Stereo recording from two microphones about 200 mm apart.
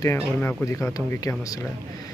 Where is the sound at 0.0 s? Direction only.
10° left (ahead or behind).